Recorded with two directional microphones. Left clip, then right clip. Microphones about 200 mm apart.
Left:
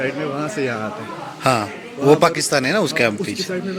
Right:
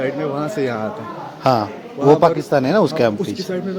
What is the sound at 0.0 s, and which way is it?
Speech, 10° right (ahead or behind).